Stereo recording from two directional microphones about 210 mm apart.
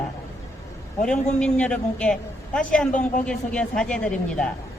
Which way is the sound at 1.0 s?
5° left (ahead or behind).